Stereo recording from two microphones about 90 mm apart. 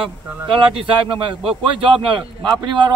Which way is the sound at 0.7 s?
70° right (ahead or behind).